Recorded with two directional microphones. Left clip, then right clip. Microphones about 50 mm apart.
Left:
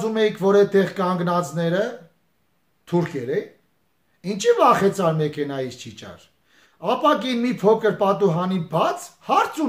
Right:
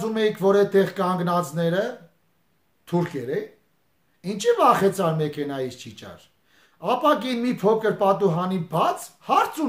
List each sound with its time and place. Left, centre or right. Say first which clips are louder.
0.0 s speech: left 2 dB; right